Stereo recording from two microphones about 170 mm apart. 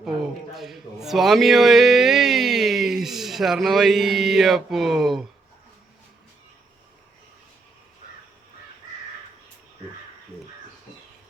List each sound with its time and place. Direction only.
0.0 s a man's voice: centre (ahead or behind)